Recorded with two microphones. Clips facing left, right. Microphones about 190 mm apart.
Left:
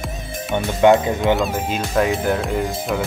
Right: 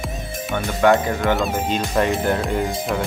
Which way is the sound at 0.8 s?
20° left (ahead or behind).